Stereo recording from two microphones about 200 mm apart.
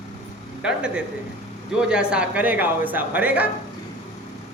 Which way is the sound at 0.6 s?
5° right (ahead or behind).